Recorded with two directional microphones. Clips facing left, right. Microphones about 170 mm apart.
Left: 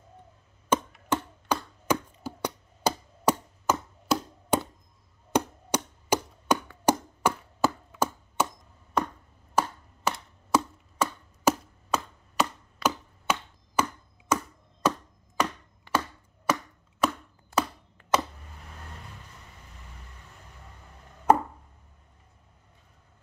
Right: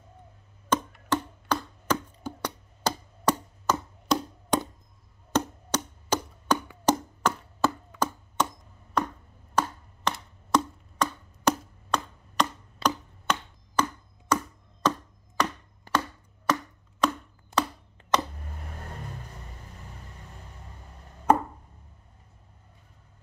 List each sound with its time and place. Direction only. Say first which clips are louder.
0.7 s a sound: even; 10° left (ahead or behind)
6.9 s chopping: even; 10° left (ahead or behind)
9.6 s chopping: even; 5° left (ahead or behind)
12.8 s a sound: even; 5° left (ahead or behind)
14.3 s chopping: right 1 dB; 10° left (ahead or behind)
15.9 s chopping: even; 40° right (ahead or behind)
16.5 s chopping: even; 10° left (ahead or behind)
17.5 s chopping: even; 20° right (ahead or behind)
18.1 s a sound: even; 5° left (ahead or behind)